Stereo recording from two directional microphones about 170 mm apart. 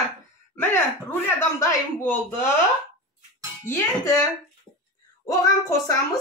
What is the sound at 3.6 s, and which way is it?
Speech, 15° left (ahead or behind).